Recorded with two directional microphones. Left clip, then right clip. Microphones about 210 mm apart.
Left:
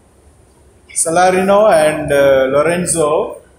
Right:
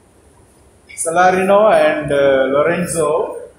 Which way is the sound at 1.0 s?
40° left (ahead or behind).